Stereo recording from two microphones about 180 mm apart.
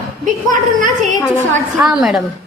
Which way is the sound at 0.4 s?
45° right (ahead or behind).